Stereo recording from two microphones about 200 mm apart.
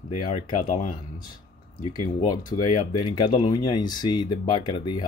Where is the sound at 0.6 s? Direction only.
40° left (ahead or behind).